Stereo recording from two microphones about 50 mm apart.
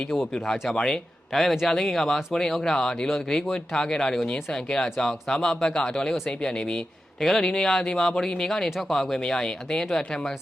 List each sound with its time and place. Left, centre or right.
0.3 s speech: centre
7.2 s speech: centre